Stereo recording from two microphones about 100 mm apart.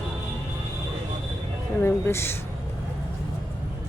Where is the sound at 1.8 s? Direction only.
25° left (ahead or behind).